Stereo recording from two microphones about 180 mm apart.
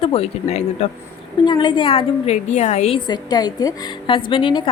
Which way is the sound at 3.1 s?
20° left (ahead or behind).